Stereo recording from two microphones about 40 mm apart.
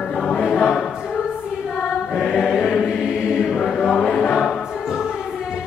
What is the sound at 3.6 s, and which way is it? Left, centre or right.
Choir, centre.